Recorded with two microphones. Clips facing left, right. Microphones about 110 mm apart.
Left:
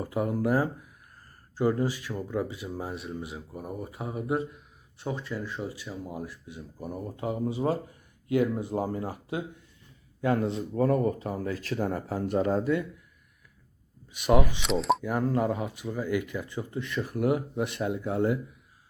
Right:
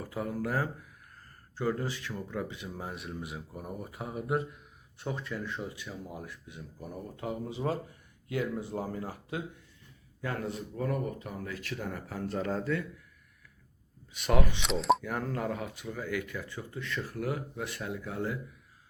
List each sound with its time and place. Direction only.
0.0 s speech: 20° left (ahead or behind); by 5.9 s 5° left (ahead or behind)
7.6 s speech: 25° left (ahead or behind)
10.8 s speech: 35° left (ahead or behind)
12.2 s speech: 20° left (ahead or behind)
14.1 s speech: 10° left (ahead or behind); by 18.3 s 25° left (ahead or behind)